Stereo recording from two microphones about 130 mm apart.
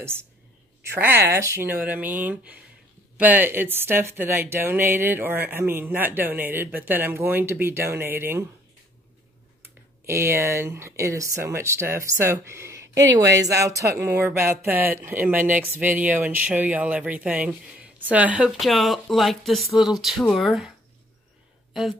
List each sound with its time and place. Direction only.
0.8 s a woman's voice: 20° right (ahead or behind)
9.6 s a woman's voice: 20° right (ahead or behind); by 20.7 s centre (ahead or behind)